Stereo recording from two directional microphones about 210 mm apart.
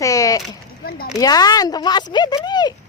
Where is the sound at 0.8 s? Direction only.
45° left (ahead or behind).